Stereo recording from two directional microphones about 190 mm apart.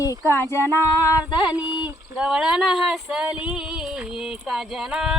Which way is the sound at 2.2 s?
5° right (ahead or behind).